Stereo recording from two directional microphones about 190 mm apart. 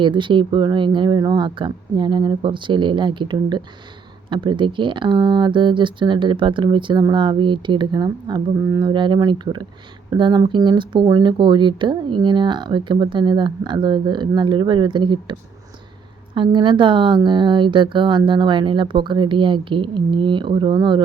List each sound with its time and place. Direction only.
0.0 s speech: 25° right (ahead or behind)